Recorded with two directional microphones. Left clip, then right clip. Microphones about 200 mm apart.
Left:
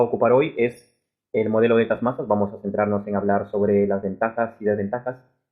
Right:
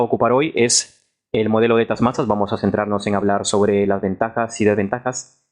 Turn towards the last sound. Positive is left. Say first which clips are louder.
# right 5 dB
turn(degrees=-30)  # may be behind; listen again after turning